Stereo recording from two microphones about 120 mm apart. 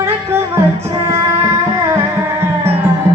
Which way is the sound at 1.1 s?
20° right (ahead or behind).